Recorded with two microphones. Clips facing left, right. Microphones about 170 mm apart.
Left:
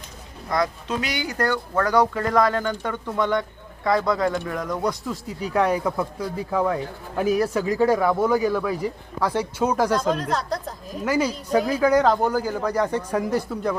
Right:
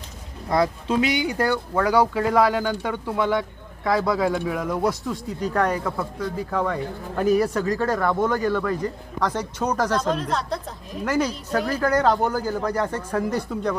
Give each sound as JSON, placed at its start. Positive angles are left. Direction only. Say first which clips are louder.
{"t": 0.5, "sound": "speech", "louder": "right 3 dB", "side_deg": -30}
{"t": 1.3, "sound": "speech", "louder": "right 1 dB", "side_deg": -10}
{"t": 7.6, "sound": "speech", "louder": "left 3 dB", "side_deg": 10}